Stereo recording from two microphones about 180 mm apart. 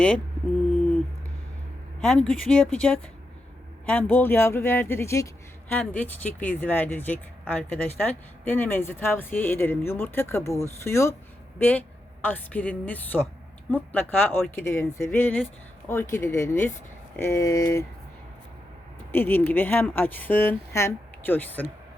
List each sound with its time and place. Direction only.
2.0 s speech: 5° left (ahead or behind)
19.1 s speech: 10° left (ahead or behind)